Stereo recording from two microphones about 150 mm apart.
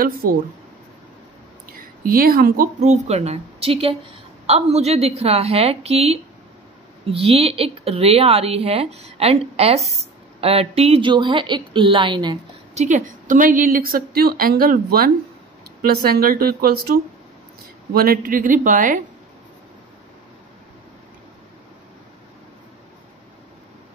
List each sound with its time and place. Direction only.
0.0 s a woman's voice: 75° right (ahead or behind)
1.7 s a woman's voice: 70° right (ahead or behind)
2.8 s a woman's voice: 50° right (ahead or behind); by 12.4 s 30° right (ahead or behind)
12.7 s a woman's voice: 55° right (ahead or behind); by 15.0 s 75° right (ahead or behind)
15.9 s speech: 90° right
17.9 s a woman's voice: 80° right; by 18.9 s 60° right (ahead or behind)